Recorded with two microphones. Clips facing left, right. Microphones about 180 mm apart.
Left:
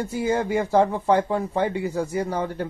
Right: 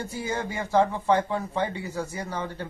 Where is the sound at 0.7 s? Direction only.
10° left (ahead or behind).